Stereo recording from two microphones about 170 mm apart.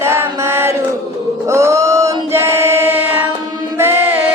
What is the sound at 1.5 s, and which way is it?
Choir, 20° right (ahead or behind).